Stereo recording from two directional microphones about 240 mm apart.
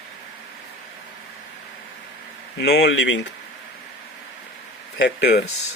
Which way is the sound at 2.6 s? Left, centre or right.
Left.